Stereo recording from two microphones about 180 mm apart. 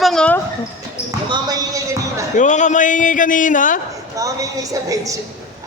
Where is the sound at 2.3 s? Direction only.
45° left (ahead or behind).